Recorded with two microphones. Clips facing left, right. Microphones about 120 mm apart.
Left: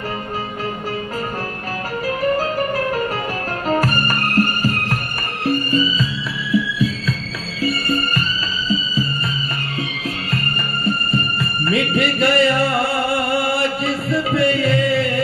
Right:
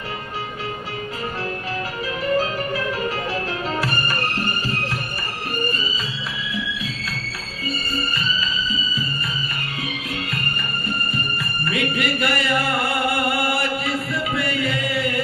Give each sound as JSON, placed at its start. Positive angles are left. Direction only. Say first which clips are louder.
{"t": 2.0, "sound": "music", "louder": "left 3 dB", "side_deg": 45}
{"t": 7.6, "sound": "music", "louder": "left 7 dB", "side_deg": 65}
{"t": 11.1, "sound": "music", "louder": "left 6 dB", "side_deg": 30}
{"t": 13.1, "sound": "chant", "louder": "left 3 dB", "side_deg": 30}